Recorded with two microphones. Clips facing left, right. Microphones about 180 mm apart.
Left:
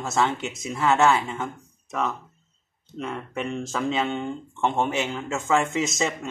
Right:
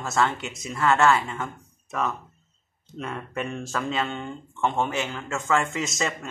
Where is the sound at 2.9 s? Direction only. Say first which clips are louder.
Left 1 dB; centre (ahead or behind); by 5.7 s 15° left (ahead or behind).